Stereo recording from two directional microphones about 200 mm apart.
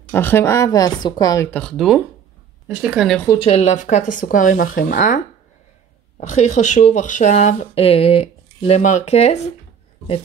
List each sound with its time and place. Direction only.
0.1 s speech: 10° left (ahead or behind)
3.3 s speech: 30° left (ahead or behind)